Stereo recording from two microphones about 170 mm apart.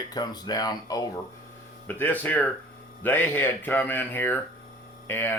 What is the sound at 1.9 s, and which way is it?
Speech, 10° left (ahead or behind).